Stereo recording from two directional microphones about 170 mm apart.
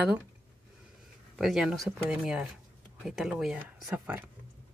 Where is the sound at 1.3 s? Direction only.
Centre (ahead or behind).